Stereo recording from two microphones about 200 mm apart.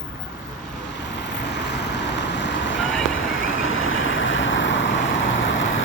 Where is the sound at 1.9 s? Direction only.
60° left (ahead or behind).